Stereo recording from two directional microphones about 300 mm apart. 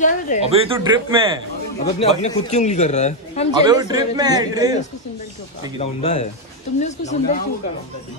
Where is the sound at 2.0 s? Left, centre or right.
Left.